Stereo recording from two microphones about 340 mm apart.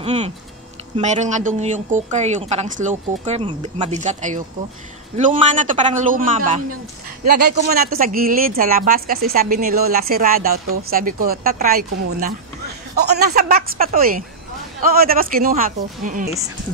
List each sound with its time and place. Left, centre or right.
0.0 s a woman's voice: centre